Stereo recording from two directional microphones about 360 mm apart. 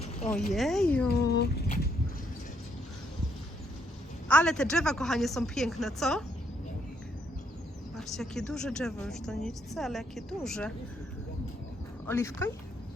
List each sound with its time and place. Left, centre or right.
0.2 s a woman's voice: centre
1.0 s speech: left
4.3 s a woman's voice: centre
7.9 s a woman's voice: centre
12.0 s speech: centre